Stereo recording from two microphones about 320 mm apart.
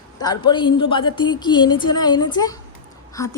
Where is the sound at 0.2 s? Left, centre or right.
Centre.